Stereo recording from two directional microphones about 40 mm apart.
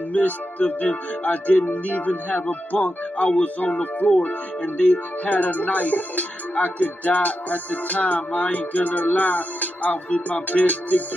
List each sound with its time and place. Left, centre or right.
0.1 s speech: left